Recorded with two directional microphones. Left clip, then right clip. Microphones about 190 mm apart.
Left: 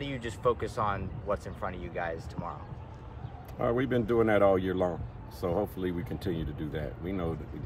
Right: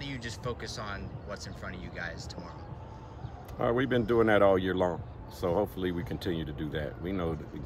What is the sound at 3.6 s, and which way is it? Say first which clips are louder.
Speech: right 1 dB; 5° right (ahead or behind).